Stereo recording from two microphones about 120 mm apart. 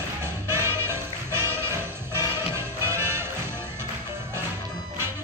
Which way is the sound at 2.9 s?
20° right (ahead or behind).